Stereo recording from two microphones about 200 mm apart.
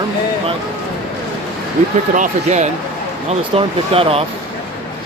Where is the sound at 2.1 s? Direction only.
40° right (ahead or behind).